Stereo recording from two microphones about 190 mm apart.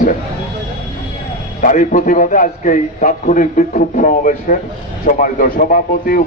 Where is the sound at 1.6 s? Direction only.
45° left (ahead or behind).